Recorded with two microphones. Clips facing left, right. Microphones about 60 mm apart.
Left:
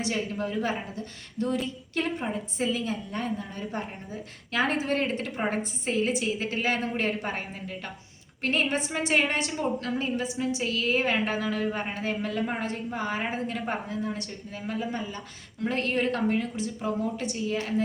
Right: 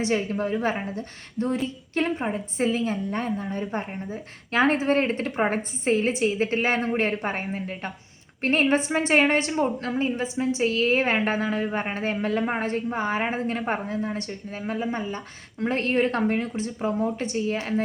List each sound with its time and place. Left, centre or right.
0.0 s a woman's voice: right